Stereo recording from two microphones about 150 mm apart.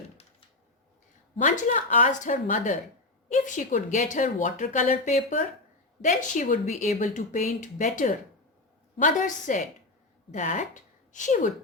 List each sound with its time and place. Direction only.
1.5 s a woman's voice: 55° left (ahead or behind)